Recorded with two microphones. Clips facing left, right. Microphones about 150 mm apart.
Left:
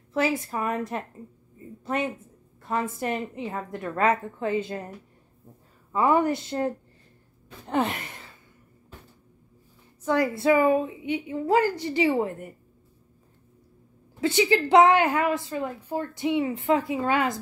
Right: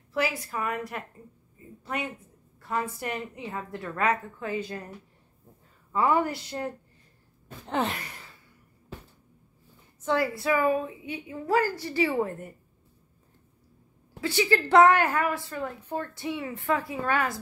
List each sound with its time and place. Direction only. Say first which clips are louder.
0.1 s a woman's voice: left 4 dB; 25° left (ahead or behind)
2.6 s a woman's voice: left 3 dB; 20° left (ahead or behind)
5.9 s a woman's voice: left 3 dB; 20° left (ahead or behind)
7.7 s a woman's voice: left 3 dB; 10° left (ahead or behind)
10.0 s a woman's voice: left 4 dB; 15° left (ahead or behind)
14.2 s a woman's voice: left 3 dB; 20° left (ahead or behind)